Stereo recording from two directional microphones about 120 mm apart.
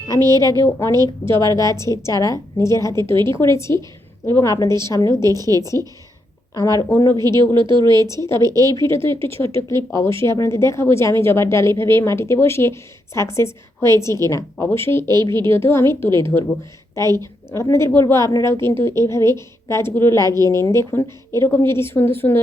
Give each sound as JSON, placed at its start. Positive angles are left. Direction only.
{"t": 0.2, "sound": "speech", "side_deg": -35}
{"t": 0.6, "sound": "a woman's voice", "side_deg": 25}
{"t": 5.2, "sound": "speech", "side_deg": -30}
{"t": 6.5, "sound": "a woman's voice", "side_deg": 30}
{"t": 7.5, "sound": "speech", "side_deg": -40}
{"t": 8.0, "sound": "a woman's voice", "side_deg": 25}
{"t": 8.3, "sound": "speech", "side_deg": -35}
{"t": 9.2, "sound": "a woman's voice", "side_deg": 20}